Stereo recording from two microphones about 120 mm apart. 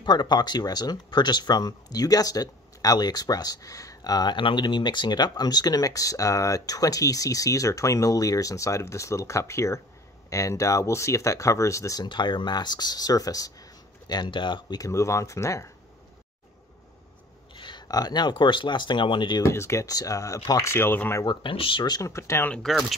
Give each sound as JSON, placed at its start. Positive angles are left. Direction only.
{"t": 0.0, "sound": "speech", "side_deg": 35}
{"t": 14.8, "sound": "speech", "side_deg": 25}
{"t": 17.6, "sound": "speech", "side_deg": 40}
{"t": 19.4, "sound": "speech", "side_deg": 25}
{"t": 21.2, "sound": "speech", "side_deg": 40}
{"t": 22.5, "sound": "speech", "side_deg": 5}